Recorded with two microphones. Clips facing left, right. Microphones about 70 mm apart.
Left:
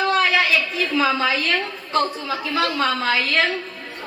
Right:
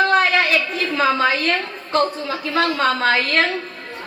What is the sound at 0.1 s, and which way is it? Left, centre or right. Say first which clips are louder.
A woman's voice: right 2 dB; right.